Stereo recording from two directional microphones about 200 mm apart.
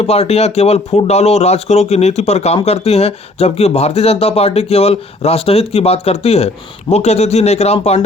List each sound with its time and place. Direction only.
0.0 s speech: 30° left (ahead or behind)